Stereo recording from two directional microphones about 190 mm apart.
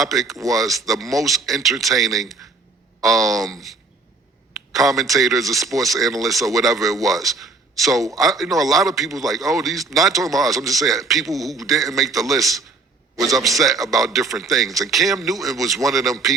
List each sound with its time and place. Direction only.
0.0 s speech: centre (ahead or behind)
0.3 s speech: 15° right (ahead or behind)
0.6 s a man's voice: centre (ahead or behind)